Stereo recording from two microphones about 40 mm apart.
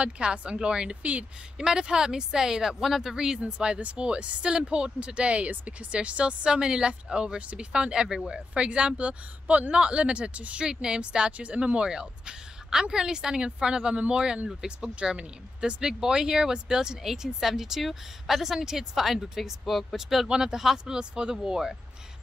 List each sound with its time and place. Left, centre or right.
0.0 s a woman's voice: right
10.7 s a woman's voice: centre
17.0 s a woman's voice: centre